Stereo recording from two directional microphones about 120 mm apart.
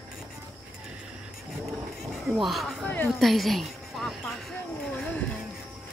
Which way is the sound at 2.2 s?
Centre (ahead or behind).